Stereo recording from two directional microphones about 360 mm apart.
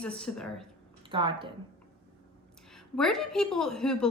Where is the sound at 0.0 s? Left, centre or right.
Centre.